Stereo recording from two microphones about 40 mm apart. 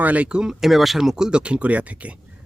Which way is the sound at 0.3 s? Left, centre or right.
Right.